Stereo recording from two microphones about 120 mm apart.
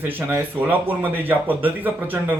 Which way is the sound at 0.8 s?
15° right (ahead or behind).